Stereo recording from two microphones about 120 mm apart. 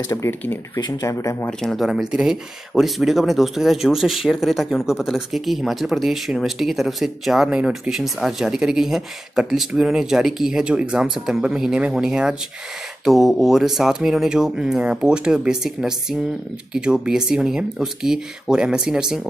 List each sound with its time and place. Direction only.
0.1 s speech: 20° left (ahead or behind)
1.6 s speech: centre (ahead or behind)